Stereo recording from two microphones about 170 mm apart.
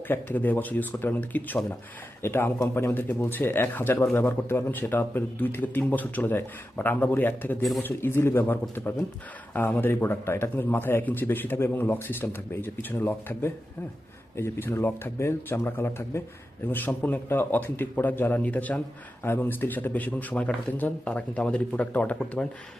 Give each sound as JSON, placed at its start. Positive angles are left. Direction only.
{"t": 0.1, "sound": "speech", "side_deg": 10}